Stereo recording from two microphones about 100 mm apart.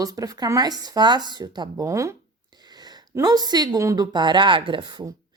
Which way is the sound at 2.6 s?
45° right (ahead or behind).